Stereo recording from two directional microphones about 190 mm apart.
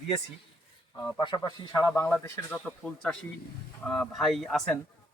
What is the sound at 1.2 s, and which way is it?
Speech, 20° left (ahead or behind).